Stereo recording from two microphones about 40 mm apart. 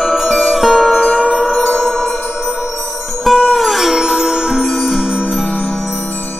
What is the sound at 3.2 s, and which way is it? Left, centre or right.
Music, centre.